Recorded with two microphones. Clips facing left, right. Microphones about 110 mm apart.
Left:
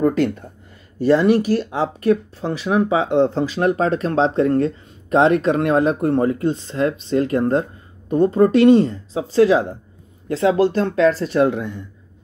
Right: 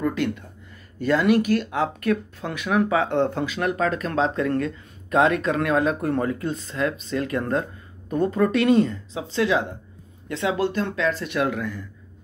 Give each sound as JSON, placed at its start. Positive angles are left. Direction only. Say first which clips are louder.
{"t": 0.0, "sound": "speech", "louder": "left 7 dB", "side_deg": 40}
{"t": 3.4, "sound": "speech", "louder": "left 5 dB", "side_deg": 35}